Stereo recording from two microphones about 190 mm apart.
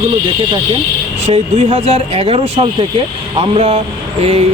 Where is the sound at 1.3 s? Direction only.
35° right (ahead or behind).